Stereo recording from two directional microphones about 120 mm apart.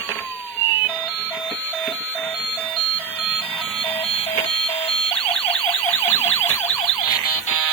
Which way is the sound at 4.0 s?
55° left (ahead or behind).